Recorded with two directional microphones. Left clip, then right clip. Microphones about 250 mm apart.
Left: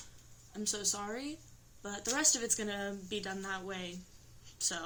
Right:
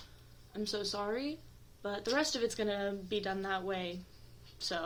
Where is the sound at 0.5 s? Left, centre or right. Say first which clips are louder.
Even; left.